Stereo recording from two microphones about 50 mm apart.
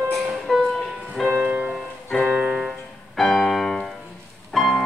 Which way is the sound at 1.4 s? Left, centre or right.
Right.